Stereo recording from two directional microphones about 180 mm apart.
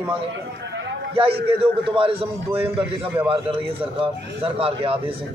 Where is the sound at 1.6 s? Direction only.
30° right (ahead or behind).